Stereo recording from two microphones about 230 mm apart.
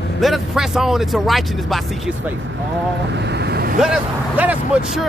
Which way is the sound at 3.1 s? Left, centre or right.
Right.